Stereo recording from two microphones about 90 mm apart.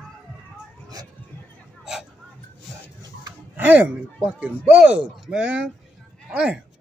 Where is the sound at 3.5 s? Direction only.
20° right (ahead or behind).